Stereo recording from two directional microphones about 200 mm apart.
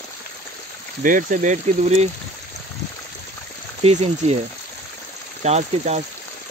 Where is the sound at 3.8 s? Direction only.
35° right (ahead or behind).